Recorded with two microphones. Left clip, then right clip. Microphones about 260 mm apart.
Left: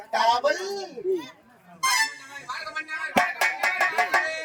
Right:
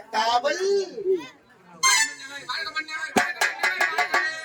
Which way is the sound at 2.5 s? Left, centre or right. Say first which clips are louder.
Right 2 dB; centre.